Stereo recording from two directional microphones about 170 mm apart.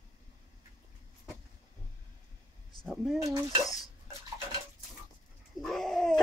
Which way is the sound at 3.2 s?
20° right (ahead or behind).